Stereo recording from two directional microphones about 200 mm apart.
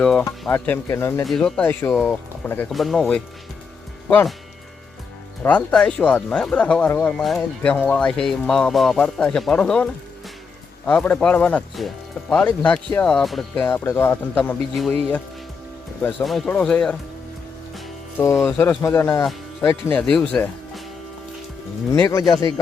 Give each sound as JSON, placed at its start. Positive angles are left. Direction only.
{"t": 0.0, "sound": "speech", "side_deg": 5}
{"t": 1.2, "sound": "speech", "side_deg": 0}
{"t": 5.4, "sound": "speech", "side_deg": 5}
{"t": 18.2, "sound": "speech", "side_deg": 15}
{"t": 21.9, "sound": "speech", "side_deg": 15}